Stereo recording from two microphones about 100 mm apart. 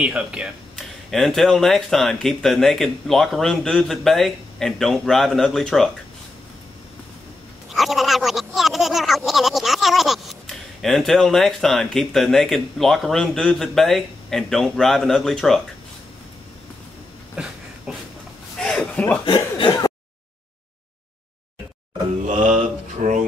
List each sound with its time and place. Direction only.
0.0 s speech: 10° right (ahead or behind)
1.1 s speech: 5° left (ahead or behind)
7.7 s speech: centre (ahead or behind)
17.4 s a sound: 10° right (ahead or behind)
18.6 s a sound: 10° left (ahead or behind)
19.2 s chuckle: 55° left (ahead or behind)